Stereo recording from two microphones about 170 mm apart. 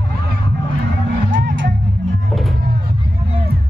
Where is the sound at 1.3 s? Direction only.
90° right.